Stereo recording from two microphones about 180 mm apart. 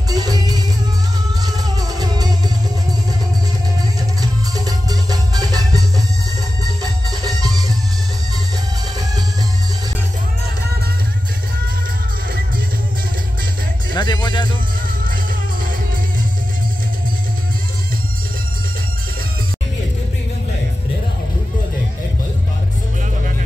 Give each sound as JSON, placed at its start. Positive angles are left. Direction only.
{"t": 0.1, "sound": "music", "side_deg": -20}
{"t": 4.2, "sound": "music", "side_deg": -20}
{"t": 13.9, "sound": "music", "side_deg": 25}